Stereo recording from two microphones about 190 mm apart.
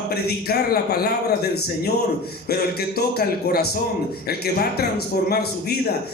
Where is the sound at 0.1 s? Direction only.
55° left (ahead or behind).